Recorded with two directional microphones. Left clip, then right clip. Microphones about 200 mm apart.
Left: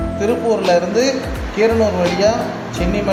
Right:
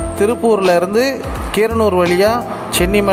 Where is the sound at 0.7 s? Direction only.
50° right (ahead or behind).